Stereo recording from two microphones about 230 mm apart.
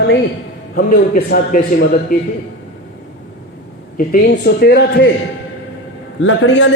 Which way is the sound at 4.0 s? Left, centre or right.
Left.